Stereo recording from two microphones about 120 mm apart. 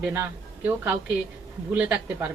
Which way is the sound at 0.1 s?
20° right (ahead or behind).